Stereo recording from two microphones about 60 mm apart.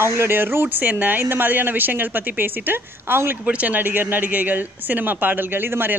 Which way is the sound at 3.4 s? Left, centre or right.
Right.